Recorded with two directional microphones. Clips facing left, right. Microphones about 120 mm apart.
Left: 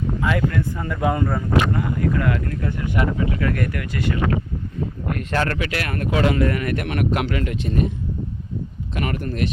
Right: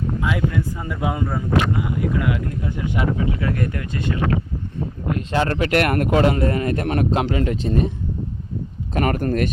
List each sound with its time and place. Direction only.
0.2 s speech: 10° right (ahead or behind); by 4.0 s 25° right (ahead or behind)
5.0 s speech: 20° right (ahead or behind)
5.5 s speech: 40° right (ahead or behind)
5.8 s speech: 55° right (ahead or behind)
6.1 s speech: 35° right (ahead or behind)
8.9 s speech: 45° right (ahead or behind)